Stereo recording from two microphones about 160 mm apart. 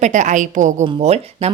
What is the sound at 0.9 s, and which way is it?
Speech, 40° right (ahead or behind).